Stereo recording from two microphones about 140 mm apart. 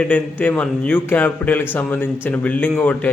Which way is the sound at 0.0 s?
10° left (ahead or behind).